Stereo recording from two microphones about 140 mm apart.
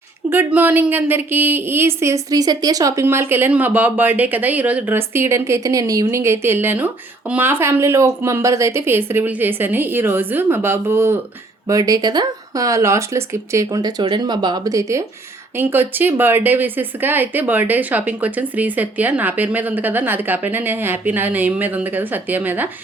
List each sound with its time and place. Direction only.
0.3 s speech: 15° right (ahead or behind)